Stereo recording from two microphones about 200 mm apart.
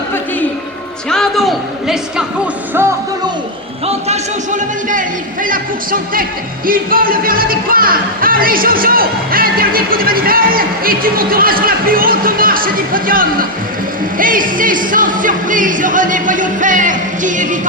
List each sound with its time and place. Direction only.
1.1 s a sound: centre (ahead or behind)
3.8 s music: 35° right (ahead or behind)
6.7 s speech: 45° right (ahead or behind)
14.2 s music: 45° right (ahead or behind)